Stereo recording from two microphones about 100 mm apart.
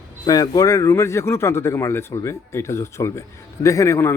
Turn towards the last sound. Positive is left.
turn(degrees=30)  # may be behind; listen again after turning